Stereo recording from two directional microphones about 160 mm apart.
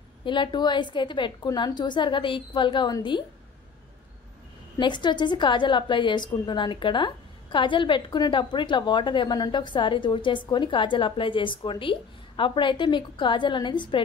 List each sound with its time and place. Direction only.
0.2 s a woman's voice: 30° left (ahead or behind)
4.7 s a woman's voice: 30° left (ahead or behind)